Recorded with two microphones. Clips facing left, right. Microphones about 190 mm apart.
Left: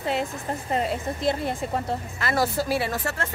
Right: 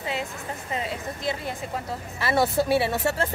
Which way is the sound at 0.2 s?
40° left (ahead or behind).